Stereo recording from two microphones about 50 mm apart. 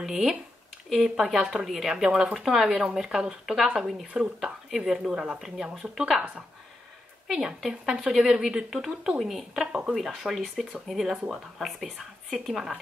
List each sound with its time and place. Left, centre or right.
0.0 s speech: centre
6.1 s speech: right
7.2 s speech: centre
9.7 s speech: centre
9.9 s speech: centre